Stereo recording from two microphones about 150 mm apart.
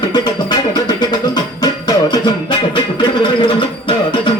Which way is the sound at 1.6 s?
25° left (ahead or behind).